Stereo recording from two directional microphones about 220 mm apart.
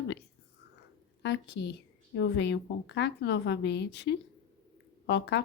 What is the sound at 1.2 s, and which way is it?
Speech, 55° left (ahead or behind).